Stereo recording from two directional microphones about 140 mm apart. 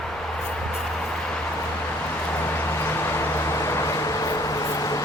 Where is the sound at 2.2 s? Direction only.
15° left (ahead or behind).